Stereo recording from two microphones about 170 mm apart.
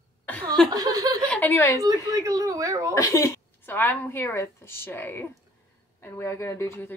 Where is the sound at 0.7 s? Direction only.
20° right (ahead or behind).